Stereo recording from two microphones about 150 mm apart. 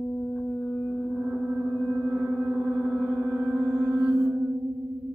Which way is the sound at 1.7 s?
5° right (ahead or behind).